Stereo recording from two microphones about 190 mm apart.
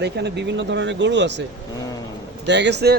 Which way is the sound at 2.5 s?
65° right (ahead or behind).